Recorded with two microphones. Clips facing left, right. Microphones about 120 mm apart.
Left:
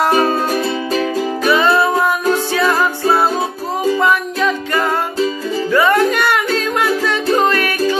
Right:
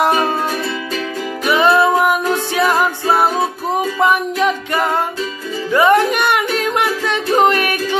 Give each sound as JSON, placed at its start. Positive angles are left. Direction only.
{"t": 1.4, "sound": "music", "side_deg": -15}